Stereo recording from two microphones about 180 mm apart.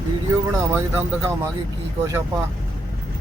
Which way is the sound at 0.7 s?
15° right (ahead or behind).